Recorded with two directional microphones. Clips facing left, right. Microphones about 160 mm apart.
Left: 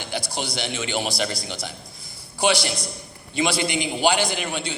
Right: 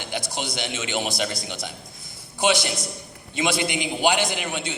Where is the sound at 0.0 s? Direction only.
20° right (ahead or behind).